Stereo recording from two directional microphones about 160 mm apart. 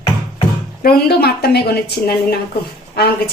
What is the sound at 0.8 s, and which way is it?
A woman's voice, 75° left (ahead or behind).